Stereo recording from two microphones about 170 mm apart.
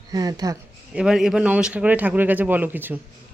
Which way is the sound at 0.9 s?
5° right (ahead or behind).